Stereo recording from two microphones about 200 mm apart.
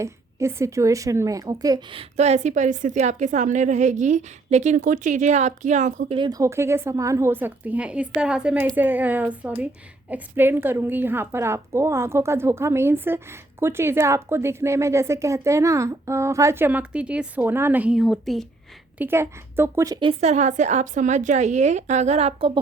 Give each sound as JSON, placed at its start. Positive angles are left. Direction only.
{"t": 0.0, "sound": "a woman's voice", "side_deg": -15}
{"t": 6.1, "sound": "a woman's voice", "side_deg": -20}
{"t": 18.9, "sound": "a woman's voice", "side_deg": -10}